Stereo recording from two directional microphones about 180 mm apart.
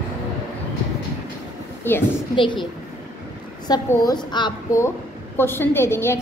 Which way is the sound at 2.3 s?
25° left (ahead or behind).